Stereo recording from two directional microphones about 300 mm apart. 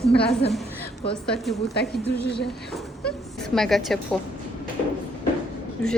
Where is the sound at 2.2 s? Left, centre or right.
Left.